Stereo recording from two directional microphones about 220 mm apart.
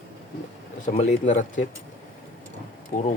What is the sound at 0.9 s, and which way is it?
Speech, 30° left (ahead or behind).